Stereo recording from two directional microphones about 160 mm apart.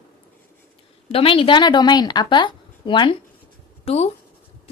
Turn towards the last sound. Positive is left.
turn(degrees=40)  # may be behind; listen again after turning